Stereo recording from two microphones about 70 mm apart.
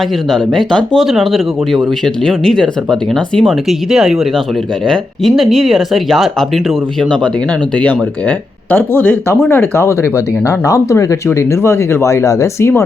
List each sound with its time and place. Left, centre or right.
0.3 s speech: centre
8.7 s speech: left